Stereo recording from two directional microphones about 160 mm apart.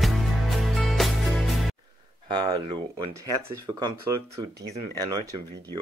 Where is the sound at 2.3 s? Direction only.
25° right (ahead or behind).